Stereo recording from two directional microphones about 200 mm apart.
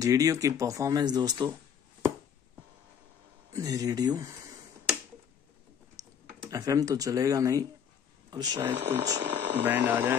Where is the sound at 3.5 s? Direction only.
15° right (ahead or behind).